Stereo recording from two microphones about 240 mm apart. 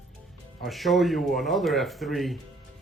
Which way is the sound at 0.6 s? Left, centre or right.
Centre.